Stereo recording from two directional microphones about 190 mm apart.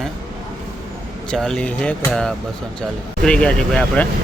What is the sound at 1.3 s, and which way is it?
Speech, 5° left (ahead or behind).